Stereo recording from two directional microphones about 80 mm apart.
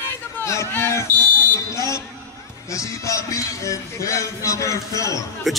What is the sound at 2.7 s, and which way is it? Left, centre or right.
Speech, left.